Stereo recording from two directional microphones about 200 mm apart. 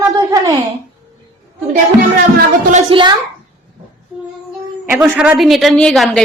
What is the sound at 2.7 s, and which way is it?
Speech, 25° right (ahead or behind).